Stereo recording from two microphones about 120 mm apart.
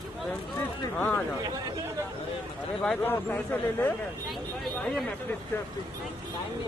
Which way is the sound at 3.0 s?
15° left (ahead or behind).